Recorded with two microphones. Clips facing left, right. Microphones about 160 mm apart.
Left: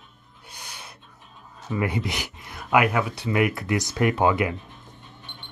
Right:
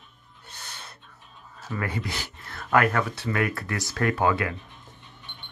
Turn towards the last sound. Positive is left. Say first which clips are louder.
# left 3 dB
turn(degrees=20)  # may be behind; listen again after turning